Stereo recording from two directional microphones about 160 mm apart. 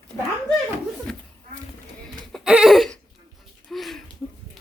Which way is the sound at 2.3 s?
5° right (ahead or behind).